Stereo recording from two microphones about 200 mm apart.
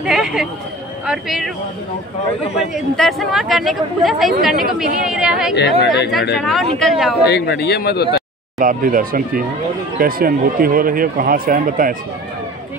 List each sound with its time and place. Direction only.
0.0 s speech: centre (ahead or behind)
2.7 s speech: centre (ahead or behind)
5.6 s speech: 55° left (ahead or behind)
6.3 s speech: centre (ahead or behind)
7.2 s speech: 55° left (ahead or behind)
8.5 s speech: 45° right (ahead or behind)